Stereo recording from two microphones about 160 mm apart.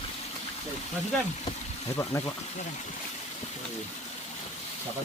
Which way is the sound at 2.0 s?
20° left (ahead or behind).